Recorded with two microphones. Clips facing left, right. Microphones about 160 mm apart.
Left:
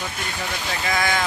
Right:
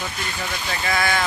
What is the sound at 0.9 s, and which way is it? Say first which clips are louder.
Speech: right 1 dB; 15° left (ahead or behind).